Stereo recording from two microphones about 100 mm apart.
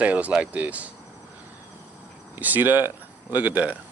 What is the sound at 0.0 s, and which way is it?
Speech, 15° right (ahead or behind).